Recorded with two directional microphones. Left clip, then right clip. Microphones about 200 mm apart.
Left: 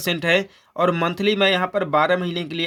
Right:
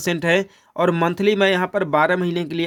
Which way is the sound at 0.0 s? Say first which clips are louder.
Right 1 dB; 25° right (ahead or behind).